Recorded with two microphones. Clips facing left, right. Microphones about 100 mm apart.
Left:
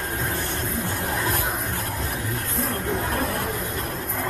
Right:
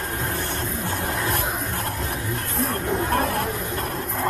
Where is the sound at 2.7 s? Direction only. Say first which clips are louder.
Right 4 dB; 70° right (ahead or behind).